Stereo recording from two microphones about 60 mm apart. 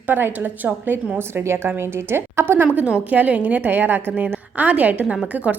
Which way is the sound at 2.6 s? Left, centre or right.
Centre.